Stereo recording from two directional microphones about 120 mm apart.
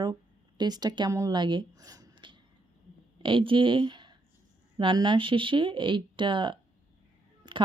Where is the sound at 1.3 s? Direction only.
40° right (ahead or behind).